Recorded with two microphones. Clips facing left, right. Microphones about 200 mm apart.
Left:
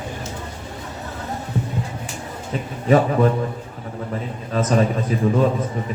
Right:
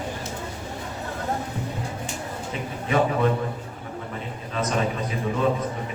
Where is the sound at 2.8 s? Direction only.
40° left (ahead or behind).